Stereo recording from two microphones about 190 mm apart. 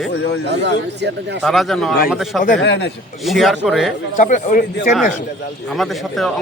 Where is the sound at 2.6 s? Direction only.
65° left (ahead or behind).